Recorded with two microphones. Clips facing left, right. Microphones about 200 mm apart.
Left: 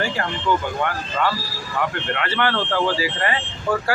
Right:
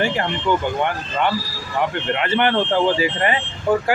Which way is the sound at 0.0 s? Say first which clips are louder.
Right 3 dB; 20° right (ahead or behind).